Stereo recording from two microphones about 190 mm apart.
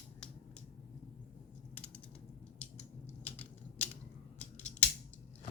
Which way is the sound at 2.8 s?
35° left (ahead or behind).